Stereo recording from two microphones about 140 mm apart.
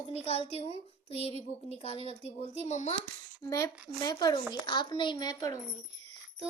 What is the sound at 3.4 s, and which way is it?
A woman's voice, 25° left (ahead or behind).